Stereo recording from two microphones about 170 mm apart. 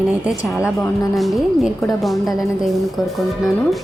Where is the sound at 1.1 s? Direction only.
Centre (ahead or behind).